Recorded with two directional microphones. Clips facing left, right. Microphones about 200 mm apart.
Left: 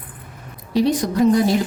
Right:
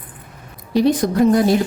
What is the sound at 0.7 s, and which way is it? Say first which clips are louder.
Speech: right 2 dB; 55° right (ahead or behind).